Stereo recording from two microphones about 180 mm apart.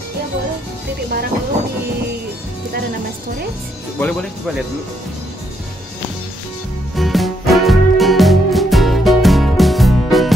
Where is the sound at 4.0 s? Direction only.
5° left (ahead or behind).